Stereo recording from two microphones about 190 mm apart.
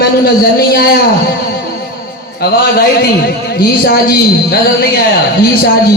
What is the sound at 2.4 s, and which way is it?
A man's voice, 55° left (ahead or behind).